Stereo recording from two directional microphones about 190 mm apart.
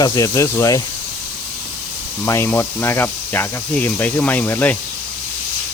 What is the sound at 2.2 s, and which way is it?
Speech, 10° left (ahead or behind).